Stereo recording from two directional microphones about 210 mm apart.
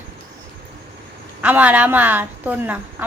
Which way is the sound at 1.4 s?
5° right (ahead or behind).